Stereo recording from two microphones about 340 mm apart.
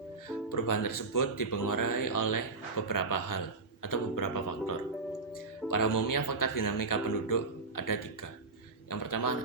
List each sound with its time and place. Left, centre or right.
0.5 s speech: left